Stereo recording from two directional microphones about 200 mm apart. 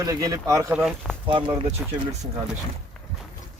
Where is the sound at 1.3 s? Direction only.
25° right (ahead or behind).